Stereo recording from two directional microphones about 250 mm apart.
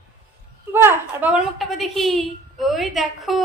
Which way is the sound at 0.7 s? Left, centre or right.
Centre.